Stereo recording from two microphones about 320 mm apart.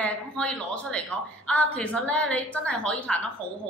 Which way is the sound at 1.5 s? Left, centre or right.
Centre.